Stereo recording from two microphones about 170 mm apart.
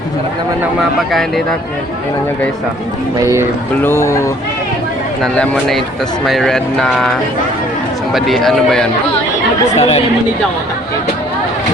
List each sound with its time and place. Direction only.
3.8 s speech: 15° left (ahead or behind)
5.2 s speech: 5° left (ahead or behind)
9.7 s speech: 35° left (ahead or behind)